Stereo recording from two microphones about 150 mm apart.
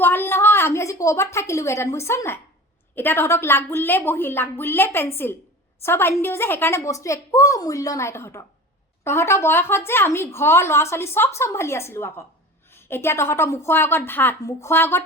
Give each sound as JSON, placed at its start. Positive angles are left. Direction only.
{"t": 0.0, "sound": "a woman's voice", "side_deg": 15}